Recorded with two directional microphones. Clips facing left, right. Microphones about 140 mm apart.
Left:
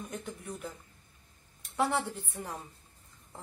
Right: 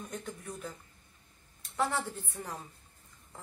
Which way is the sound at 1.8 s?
15° left (ahead or behind).